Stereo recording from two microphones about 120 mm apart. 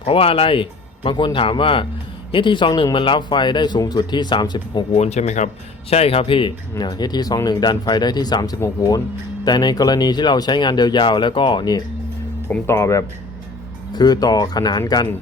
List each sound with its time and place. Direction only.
0.0 s a man's voice: 50° left (ahead or behind)
4.9 s speech: 65° left (ahead or behind)
5.9 s speech: 55° left (ahead or behind)
6.7 s a man's voice: 35° left (ahead or behind)
12.6 s speech: 25° left (ahead or behind)
13.9 s a man's voice: 35° left (ahead or behind)